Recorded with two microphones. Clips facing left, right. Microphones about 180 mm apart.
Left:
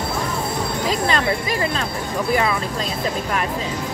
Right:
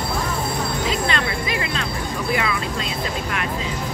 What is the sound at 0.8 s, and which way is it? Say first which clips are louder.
Music: left 5 dB; 40° left (ahead or behind).